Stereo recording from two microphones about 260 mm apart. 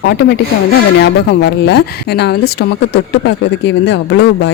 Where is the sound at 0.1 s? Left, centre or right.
Left.